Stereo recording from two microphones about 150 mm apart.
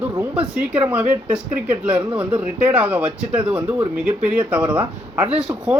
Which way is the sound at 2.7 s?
10° right (ahead or behind).